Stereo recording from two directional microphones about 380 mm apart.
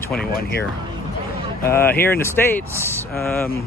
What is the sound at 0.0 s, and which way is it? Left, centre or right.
Speech, centre.